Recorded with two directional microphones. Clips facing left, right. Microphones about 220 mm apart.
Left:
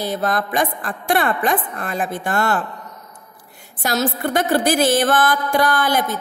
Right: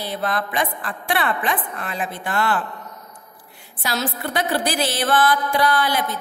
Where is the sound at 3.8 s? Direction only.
45° left (ahead or behind).